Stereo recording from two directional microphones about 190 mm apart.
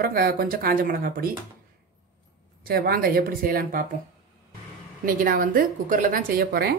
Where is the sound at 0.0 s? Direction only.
50° right (ahead or behind).